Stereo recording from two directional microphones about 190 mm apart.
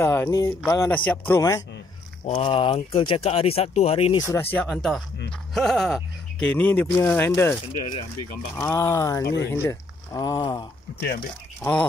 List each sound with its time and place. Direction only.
0.0 s speech: 15° left (ahead or behind)
2.2 s speech: 30° left (ahead or behind)
4.2 s speech: 15° left (ahead or behind)
8.5 s speech: 15° left (ahead or behind)
11.0 s speech: 50° left (ahead or behind)